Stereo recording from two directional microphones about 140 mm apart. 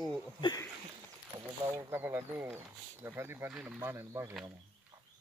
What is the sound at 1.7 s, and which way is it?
Speech, 15° right (ahead or behind).